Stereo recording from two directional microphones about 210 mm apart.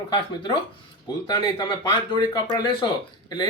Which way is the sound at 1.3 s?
20° left (ahead or behind).